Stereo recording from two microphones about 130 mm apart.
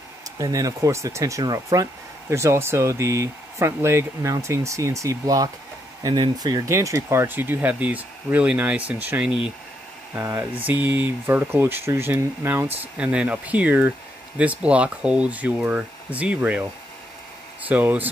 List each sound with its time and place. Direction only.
0.4 s speech: 25° right (ahead or behind); by 16.6 s 10° right (ahead or behind)
17.6 s speech: 10° right (ahead or behind)